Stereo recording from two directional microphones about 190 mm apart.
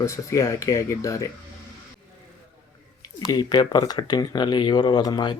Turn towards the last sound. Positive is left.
turn(degrees=20)  # may be behind; listen again after turning